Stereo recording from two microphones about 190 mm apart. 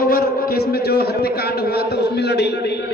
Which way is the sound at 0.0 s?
50° left (ahead or behind).